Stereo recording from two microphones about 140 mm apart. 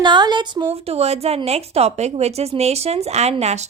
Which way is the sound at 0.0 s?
30° right (ahead or behind).